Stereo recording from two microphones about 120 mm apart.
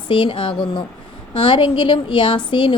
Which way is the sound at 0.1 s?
45° left (ahead or behind).